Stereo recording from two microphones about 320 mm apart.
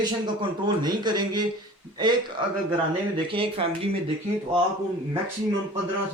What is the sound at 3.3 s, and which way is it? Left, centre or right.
Speech, centre.